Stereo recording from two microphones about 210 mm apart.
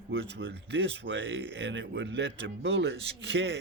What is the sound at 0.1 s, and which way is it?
Speech, 60° right (ahead or behind).